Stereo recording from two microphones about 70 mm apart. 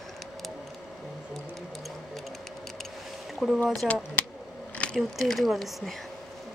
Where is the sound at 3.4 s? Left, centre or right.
Centre.